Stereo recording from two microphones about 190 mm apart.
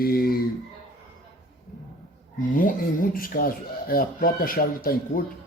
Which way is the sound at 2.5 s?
45° left (ahead or behind).